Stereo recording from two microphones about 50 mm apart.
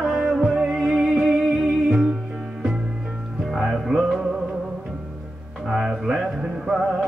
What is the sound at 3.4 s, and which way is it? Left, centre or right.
Music, centre.